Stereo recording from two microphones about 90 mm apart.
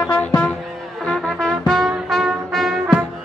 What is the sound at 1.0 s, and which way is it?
Brass instrument, 10° left (ahead or behind).